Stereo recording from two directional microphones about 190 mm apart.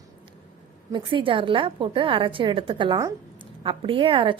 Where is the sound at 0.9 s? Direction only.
25° right (ahead or behind).